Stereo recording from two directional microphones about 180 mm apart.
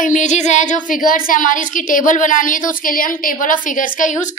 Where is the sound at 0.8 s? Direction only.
50° left (ahead or behind).